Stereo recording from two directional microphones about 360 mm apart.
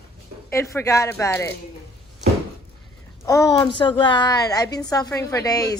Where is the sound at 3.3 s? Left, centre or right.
Centre.